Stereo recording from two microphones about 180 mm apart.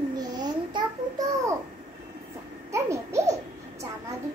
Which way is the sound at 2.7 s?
15° right (ahead or behind).